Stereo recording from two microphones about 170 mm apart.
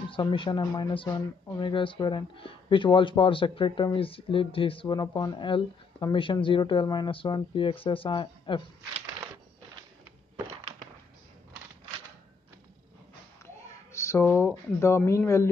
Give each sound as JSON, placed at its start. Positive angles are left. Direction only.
{"t": 0.1, "sound": "speech", "side_deg": 30}
{"t": 13.9, "sound": "a sound", "side_deg": 15}
{"t": 14.2, "sound": "speech", "side_deg": 15}